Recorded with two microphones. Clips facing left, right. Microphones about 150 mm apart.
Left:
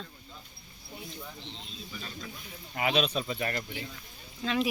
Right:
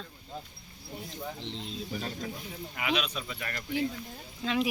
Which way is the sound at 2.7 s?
35° left (ahead or behind).